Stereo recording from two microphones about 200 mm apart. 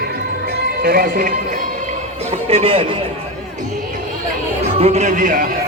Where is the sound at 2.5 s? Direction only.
30° right (ahead or behind).